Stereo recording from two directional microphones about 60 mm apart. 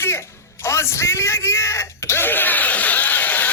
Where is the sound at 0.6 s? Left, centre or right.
Left.